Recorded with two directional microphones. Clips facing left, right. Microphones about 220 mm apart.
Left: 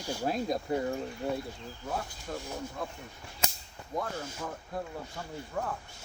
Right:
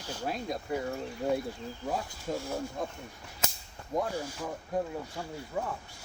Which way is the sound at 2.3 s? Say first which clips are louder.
Right 5 dB; 20° right (ahead or behind).